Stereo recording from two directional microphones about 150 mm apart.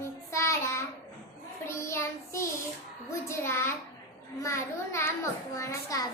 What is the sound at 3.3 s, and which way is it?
A child's voice, 15° left (ahead or behind).